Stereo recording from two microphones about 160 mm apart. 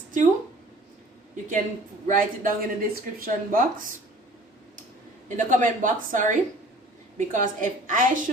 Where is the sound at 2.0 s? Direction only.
55° right (ahead or behind).